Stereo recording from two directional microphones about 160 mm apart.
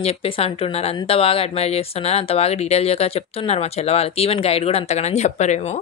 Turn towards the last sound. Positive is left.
turn(degrees=45)  # may be behind; listen again after turning